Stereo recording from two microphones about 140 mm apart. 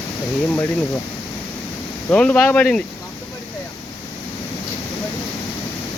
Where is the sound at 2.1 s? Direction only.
10° left (ahead or behind).